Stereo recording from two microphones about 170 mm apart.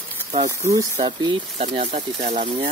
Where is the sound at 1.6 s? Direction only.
40° right (ahead or behind).